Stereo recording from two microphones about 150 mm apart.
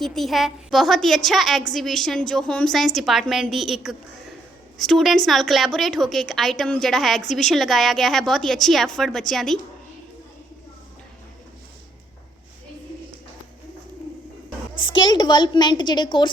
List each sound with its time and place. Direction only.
0.0 s a woman's voice: centre (ahead or behind)
14.8 s a woman's voice: 30° left (ahead or behind)